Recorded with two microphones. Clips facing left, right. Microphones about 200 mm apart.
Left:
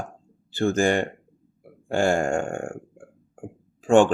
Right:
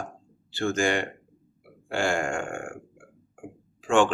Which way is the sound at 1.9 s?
40° left (ahead or behind).